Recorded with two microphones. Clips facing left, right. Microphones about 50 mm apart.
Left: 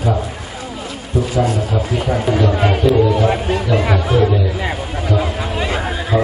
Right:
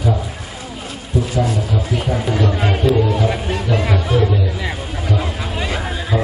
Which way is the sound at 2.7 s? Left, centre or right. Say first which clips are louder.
Left 2 dB; centre.